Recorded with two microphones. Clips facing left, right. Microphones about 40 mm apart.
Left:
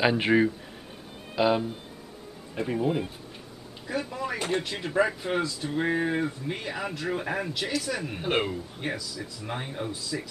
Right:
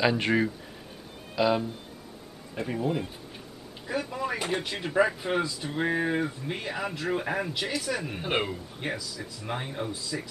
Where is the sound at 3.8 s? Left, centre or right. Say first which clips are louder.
Even; centre.